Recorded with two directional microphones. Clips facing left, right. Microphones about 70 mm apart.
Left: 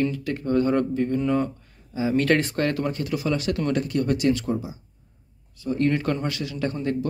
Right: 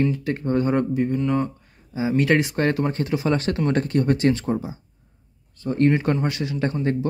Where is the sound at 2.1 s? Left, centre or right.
Centre; by 5.8 s right.